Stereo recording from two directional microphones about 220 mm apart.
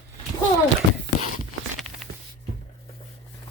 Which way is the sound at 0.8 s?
60° right (ahead or behind).